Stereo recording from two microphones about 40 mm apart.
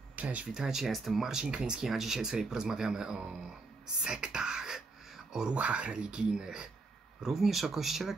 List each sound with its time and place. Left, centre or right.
0.1 s speech: right
0.6 s speech: centre
1.3 s speech: centre
3.8 s a sound: right
5.5 s speech: right
7.2 s speech: centre